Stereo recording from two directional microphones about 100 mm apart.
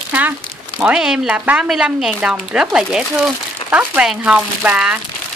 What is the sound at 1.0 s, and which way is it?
Speech, 5° right (ahead or behind).